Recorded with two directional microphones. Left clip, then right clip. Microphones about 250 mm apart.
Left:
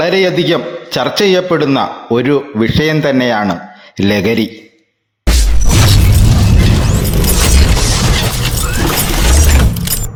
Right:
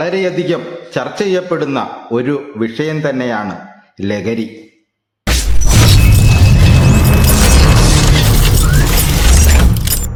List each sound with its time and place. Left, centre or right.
0.0 s a man's voice: centre
5.6 s music: centre
8.1 s a sound: centre